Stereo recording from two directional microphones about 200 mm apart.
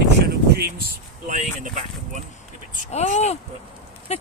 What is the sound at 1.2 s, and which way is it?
Speech, 40° right (ahead or behind).